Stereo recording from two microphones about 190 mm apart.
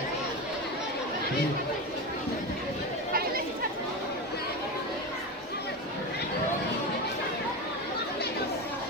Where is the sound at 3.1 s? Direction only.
50° right (ahead or behind).